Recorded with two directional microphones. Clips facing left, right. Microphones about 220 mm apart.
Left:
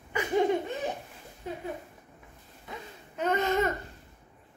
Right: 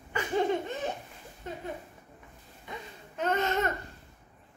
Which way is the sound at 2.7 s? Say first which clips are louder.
Even; 10° left (ahead or behind).